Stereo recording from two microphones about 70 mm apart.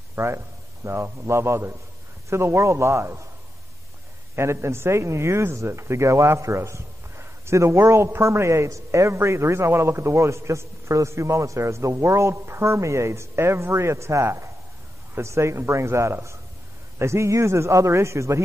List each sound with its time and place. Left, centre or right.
0.1 s a man's voice: right
4.4 s a man's voice: right